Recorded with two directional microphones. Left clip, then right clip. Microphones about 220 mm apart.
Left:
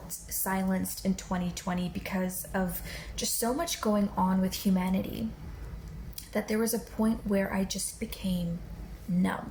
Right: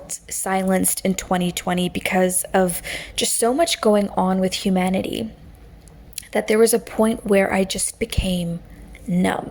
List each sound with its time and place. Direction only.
0.3 s speech: 45° right (ahead or behind)